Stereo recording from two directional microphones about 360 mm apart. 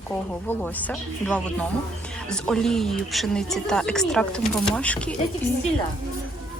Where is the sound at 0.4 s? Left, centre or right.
Centre.